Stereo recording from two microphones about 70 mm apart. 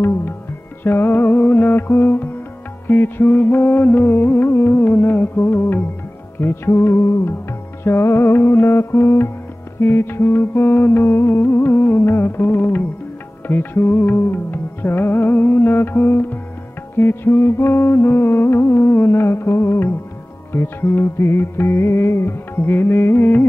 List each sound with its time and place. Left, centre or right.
0.8 s music: left